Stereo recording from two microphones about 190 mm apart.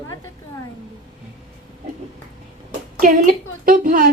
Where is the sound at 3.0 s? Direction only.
45° right (ahead or behind).